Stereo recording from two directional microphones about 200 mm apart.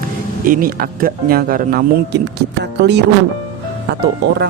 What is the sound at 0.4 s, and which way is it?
Speech, 45° right (ahead or behind).